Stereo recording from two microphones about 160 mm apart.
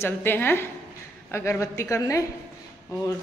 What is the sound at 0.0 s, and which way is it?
A woman's voice, 15° left (ahead or behind).